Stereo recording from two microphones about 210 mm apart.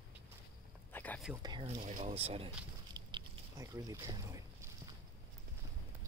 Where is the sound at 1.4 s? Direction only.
20° right (ahead or behind).